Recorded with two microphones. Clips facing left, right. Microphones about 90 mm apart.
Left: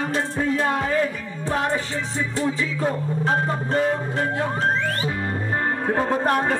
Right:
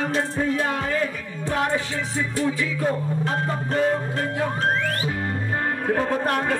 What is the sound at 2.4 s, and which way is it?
Speech, 25° left (ahead or behind).